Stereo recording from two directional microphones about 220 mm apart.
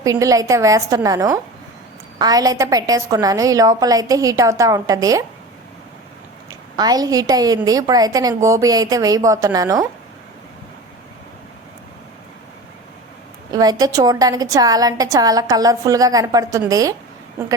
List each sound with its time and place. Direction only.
0.0 s a woman's voice: 15° right (ahead or behind)
6.5 s a woman's voice: 15° right (ahead or behind)
13.5 s a woman's voice: 15° right (ahead or behind)